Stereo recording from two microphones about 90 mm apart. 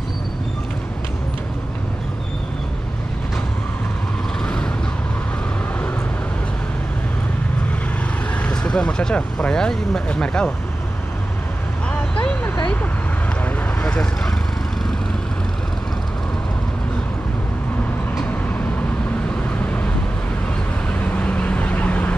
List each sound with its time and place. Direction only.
8.4 s speech: 10° left (ahead or behind)
12.2 s vehicle: 15° left (ahead or behind)
13.8 s vehicle: 10° left (ahead or behind)
19.6 s vehicle: 15° left (ahead or behind)
21.0 s vehicle: 15° left (ahead or behind)